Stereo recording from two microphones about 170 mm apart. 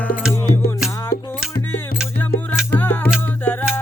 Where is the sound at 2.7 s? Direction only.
10° left (ahead or behind).